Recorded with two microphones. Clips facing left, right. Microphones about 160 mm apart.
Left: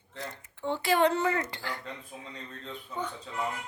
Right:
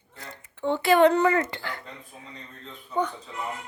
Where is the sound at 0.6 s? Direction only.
65° right (ahead or behind).